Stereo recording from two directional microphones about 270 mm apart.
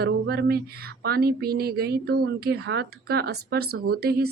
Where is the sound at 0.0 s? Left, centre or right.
Right.